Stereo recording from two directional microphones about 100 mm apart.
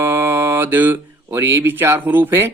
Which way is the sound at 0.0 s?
25° right (ahead or behind).